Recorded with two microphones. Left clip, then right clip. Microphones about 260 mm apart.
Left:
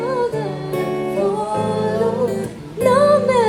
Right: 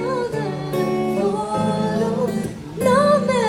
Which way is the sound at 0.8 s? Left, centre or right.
Left.